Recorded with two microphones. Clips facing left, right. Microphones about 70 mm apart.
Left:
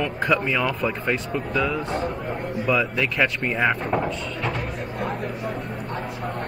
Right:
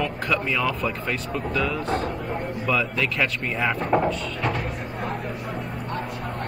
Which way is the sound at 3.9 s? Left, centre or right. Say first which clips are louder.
Right 3 dB; centre.